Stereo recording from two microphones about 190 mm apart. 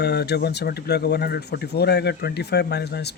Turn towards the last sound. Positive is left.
turn(degrees=60)  # may be behind; listen again after turning